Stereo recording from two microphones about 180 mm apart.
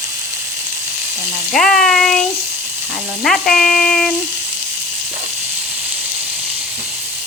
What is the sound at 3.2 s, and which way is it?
Speech, 5° left (ahead or behind).